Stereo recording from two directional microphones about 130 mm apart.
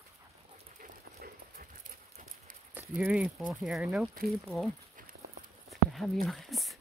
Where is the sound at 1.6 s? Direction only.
90° right.